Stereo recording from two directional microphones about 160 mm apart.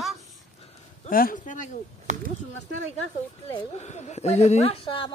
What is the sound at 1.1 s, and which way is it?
Speech, 60° left (ahead or behind).